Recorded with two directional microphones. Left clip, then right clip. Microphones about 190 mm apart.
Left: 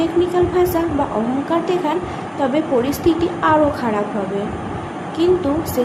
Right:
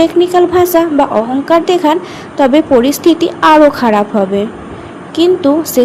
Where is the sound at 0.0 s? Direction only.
50° right (ahead or behind).